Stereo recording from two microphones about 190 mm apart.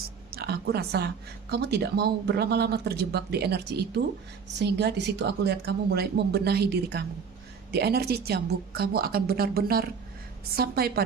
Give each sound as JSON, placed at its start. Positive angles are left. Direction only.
{"t": 0.3, "sound": "a woman's voice", "side_deg": -55}